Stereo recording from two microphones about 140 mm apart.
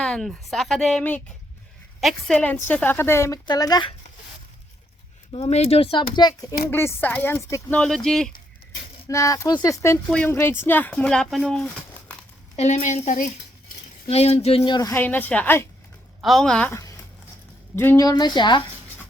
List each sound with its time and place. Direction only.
0.0 s speech: 5° left (ahead or behind); by 3.9 s 30° left (ahead or behind)
5.3 s speech: 50° left (ahead or behind); by 6.6 s 30° left (ahead or behind)
6.7 s speech: 15° left (ahead or behind)
7.8 s speech: 5° left (ahead or behind)
9.0 s speech: 20° left (ahead or behind)
10.1 s speech: 10° left (ahead or behind)
12.5 s speech: 60° left (ahead or behind)
14.1 s speech: 50° left (ahead or behind)
14.8 s speech: 20° left (ahead or behind)
16.6 s speech: 20° left (ahead or behind)
18.0 s speech: 30° left (ahead or behind)